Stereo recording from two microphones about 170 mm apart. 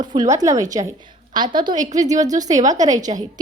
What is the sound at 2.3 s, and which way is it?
Speech, 20° right (ahead or behind).